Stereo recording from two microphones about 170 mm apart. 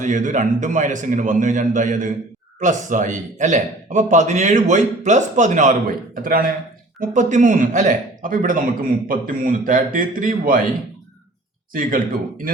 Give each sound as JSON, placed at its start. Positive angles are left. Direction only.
{"t": 0.0, "sound": "a man's voice", "side_deg": -50}
{"t": 6.2, "sound": "a man's voice", "side_deg": -55}
{"t": 11.7, "sound": "a man's voice", "side_deg": -55}